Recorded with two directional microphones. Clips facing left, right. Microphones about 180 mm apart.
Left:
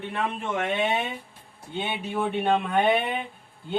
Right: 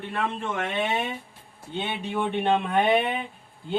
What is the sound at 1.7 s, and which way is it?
Speech, 5° left (ahead or behind).